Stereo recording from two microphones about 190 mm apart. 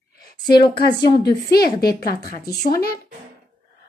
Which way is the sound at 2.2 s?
50° left (ahead or behind).